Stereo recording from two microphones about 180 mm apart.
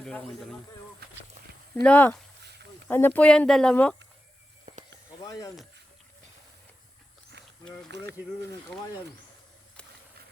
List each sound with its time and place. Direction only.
1.0 s speech: 60° right (ahead or behind)
1.7 s speech: 10° left (ahead or behind)
4.6 s snake: 40° right (ahead or behind)
5.2 s speech: 20° left (ahead or behind)
7.9 s speech: 70° right (ahead or behind)